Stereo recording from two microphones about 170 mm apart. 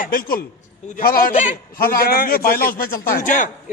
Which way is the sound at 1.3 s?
45° left (ahead or behind).